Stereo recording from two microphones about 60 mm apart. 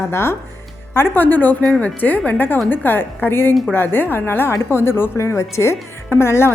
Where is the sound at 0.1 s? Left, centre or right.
Left.